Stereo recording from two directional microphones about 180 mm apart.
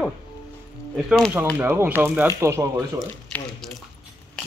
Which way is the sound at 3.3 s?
10° left (ahead or behind).